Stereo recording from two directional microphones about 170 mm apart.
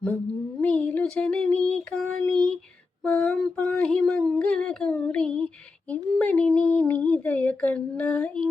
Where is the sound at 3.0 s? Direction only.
10° left (ahead or behind).